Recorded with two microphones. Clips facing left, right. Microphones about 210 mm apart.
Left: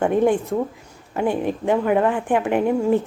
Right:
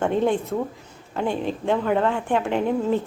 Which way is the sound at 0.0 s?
15° left (ahead or behind).